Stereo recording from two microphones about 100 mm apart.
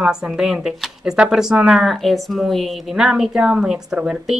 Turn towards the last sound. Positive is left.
turn(degrees=-5)  # may be behind; listen again after turning